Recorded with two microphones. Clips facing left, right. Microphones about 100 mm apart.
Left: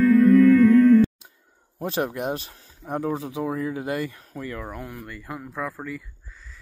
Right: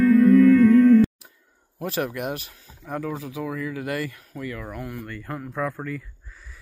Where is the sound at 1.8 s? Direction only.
25° left (ahead or behind); by 6.0 s 5° left (ahead or behind).